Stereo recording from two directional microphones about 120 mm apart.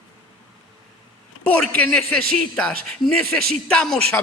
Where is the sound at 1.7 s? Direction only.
10° left (ahead or behind).